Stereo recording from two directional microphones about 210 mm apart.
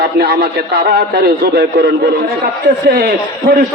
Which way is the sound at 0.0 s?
45° right (ahead or behind).